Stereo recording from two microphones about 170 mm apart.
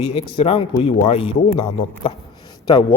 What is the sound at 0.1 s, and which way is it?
Speech, 35° left (ahead or behind).